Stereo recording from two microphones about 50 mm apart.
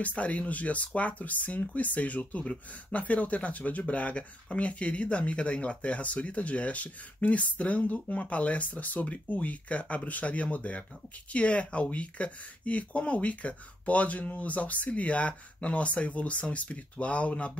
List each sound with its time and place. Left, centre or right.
0.0 s speech: left